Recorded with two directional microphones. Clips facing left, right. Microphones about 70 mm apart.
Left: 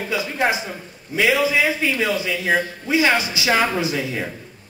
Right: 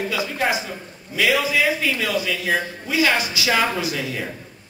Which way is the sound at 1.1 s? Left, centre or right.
Left.